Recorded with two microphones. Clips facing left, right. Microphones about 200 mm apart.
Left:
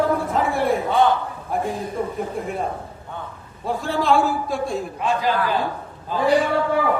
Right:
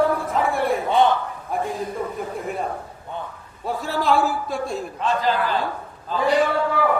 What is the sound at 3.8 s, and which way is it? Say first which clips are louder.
Speech: left 1 dB; centre (ahead or behind).